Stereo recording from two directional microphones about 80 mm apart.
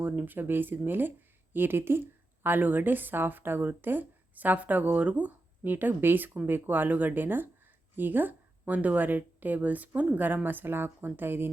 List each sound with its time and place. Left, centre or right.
0.0 s speech: right